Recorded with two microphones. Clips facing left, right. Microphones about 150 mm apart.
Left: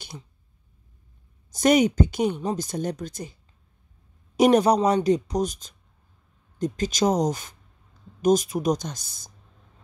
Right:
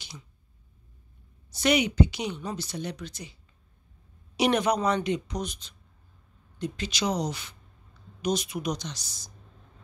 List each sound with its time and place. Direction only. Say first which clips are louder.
1.5 s speech: left 6 dB; 45° left (ahead or behind)
4.4 s speech: left 7 dB; 40° left (ahead or behind)